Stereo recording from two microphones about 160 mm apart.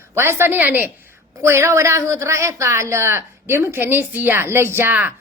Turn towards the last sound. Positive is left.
turn(degrees=-10)  # may be behind; listen again after turning